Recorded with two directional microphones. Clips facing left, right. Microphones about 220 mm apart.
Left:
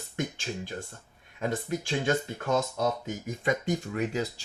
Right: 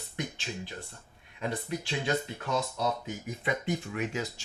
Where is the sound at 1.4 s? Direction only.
45° left (ahead or behind).